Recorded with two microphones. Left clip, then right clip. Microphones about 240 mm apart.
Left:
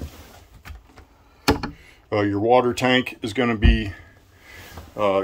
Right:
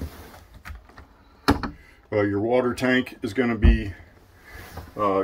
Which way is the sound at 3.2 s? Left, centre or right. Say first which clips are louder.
Left 2 dB; centre.